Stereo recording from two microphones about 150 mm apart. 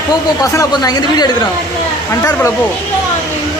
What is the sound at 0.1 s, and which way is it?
Speech, 25° left (ahead or behind).